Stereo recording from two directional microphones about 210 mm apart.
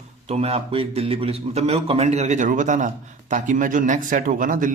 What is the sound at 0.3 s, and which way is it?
A man's voice, 30° right (ahead or behind).